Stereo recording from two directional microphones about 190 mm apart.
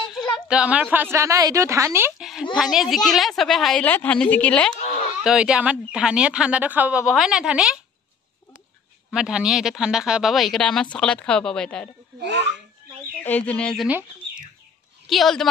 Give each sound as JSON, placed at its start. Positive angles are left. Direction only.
{"t": 0.5, "sound": "a woman's voice", "side_deg": -5}
{"t": 4.7, "sound": "a sound", "side_deg": 35}
{"t": 5.2, "sound": "speech", "side_deg": -5}
{"t": 9.1, "sound": "speech", "side_deg": -5}
{"t": 12.2, "sound": "speech", "side_deg": -65}
{"t": 13.2, "sound": "speech", "side_deg": 10}
{"t": 15.0, "sound": "speech", "side_deg": 0}